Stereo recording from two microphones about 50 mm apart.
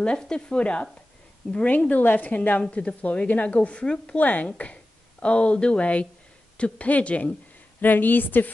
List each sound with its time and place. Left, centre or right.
0.0 s speech: centre
1.4 s speech: centre
1.9 s a woman's voice: left; by 4.2 s centre
4.2 s a woman's voice: left
5.2 s speech: left
7.8 s a woman's voice: left